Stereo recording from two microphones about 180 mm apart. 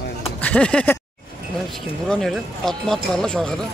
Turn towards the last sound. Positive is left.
turn(degrees=5)  # may be behind; listen again after turning